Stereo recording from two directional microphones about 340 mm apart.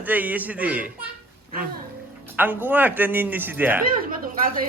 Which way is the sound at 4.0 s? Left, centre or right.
Right.